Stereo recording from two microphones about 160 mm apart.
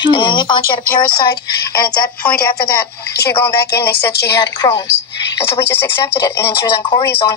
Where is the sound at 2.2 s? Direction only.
10° left (ahead or behind).